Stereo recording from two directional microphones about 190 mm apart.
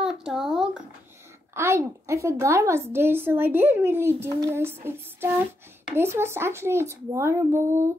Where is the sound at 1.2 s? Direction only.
15° right (ahead or behind).